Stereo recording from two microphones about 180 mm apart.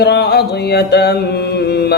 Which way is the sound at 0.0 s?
65° left (ahead or behind).